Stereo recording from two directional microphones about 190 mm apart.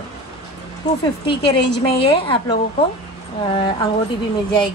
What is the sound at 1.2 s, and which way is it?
A woman's voice, 25° left (ahead or behind).